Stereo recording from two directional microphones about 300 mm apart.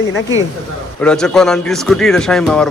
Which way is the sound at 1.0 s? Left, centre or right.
Centre.